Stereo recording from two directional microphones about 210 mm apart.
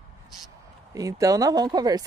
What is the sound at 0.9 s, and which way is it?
Speech, 15° right (ahead or behind).